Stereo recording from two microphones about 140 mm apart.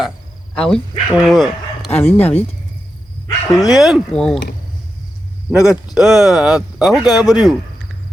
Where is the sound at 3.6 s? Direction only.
Centre (ahead or behind).